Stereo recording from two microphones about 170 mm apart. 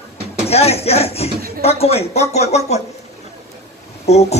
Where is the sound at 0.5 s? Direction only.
35° left (ahead or behind).